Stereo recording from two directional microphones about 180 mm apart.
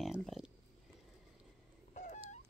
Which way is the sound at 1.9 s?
40° left (ahead or behind).